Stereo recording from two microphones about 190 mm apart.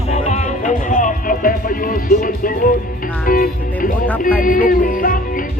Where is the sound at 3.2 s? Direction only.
50° left (ahead or behind).